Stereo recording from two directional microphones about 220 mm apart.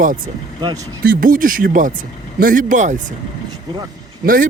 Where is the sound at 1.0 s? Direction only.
40° right (ahead or behind).